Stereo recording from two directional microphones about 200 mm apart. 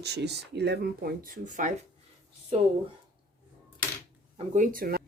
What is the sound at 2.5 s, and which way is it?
Speech, 30° right (ahead or behind).